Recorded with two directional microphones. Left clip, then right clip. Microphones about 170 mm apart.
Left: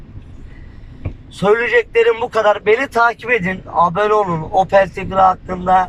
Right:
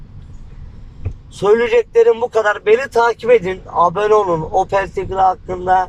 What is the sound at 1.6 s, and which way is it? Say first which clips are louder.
A man's voice: right 1 dB; 15° right (ahead or behind).